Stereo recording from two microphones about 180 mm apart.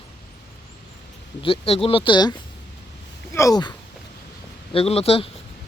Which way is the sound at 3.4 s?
20° left (ahead or behind).